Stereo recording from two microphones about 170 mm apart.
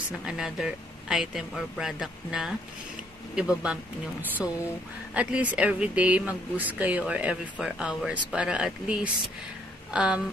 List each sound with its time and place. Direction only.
0.3 s speech: 5° right (ahead or behind)
5.1 s speech: 5° right (ahead or behind)